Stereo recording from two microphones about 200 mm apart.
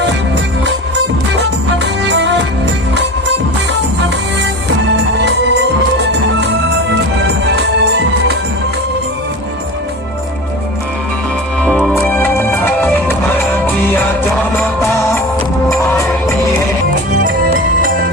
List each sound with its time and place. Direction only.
1.8 s music: 60° right (ahead or behind)
6.0 s music: 60° right (ahead or behind)
11.6 s music: 5° left (ahead or behind)